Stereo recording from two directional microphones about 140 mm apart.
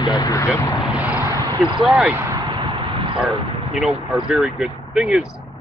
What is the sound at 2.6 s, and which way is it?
Vehicle, 40° right (ahead or behind).